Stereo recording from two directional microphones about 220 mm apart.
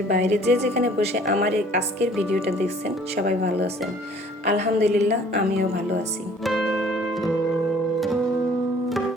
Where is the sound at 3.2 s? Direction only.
45° right (ahead or behind).